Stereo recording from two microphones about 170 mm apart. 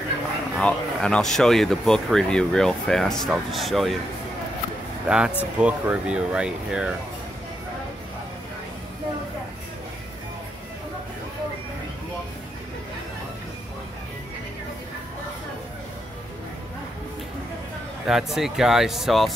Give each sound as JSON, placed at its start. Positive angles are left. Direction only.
{"t": 0.6, "sound": "speech", "side_deg": 5}
{"t": 5.0, "sound": "speech", "side_deg": -5}
{"t": 18.0, "sound": "speech", "side_deg": 0}